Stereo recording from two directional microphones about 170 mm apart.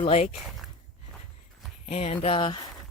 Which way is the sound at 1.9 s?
40° left (ahead or behind).